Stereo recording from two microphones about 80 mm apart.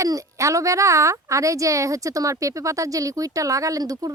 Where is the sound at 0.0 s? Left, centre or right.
Right.